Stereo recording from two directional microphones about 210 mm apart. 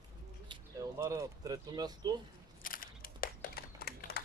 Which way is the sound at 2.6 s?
40° left (ahead or behind).